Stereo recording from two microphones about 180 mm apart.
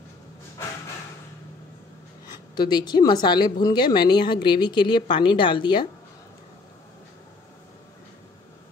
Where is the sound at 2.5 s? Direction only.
25° left (ahead or behind).